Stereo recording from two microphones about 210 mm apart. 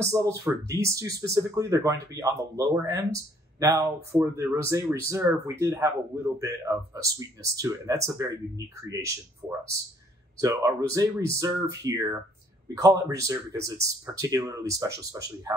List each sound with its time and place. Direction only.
0.0 s speech: 15° right (ahead or behind)
10.4 s speech: 15° right (ahead or behind)